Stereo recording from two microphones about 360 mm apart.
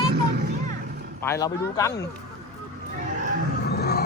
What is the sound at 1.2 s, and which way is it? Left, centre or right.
Speech, centre.